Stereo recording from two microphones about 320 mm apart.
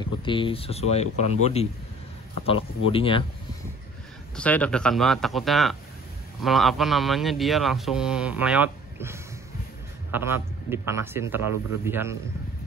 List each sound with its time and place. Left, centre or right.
0.0 s a man's voice: centre
4.4 s a man's voice: centre